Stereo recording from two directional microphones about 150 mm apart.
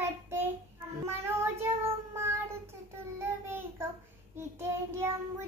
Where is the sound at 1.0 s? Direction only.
15° right (ahead or behind).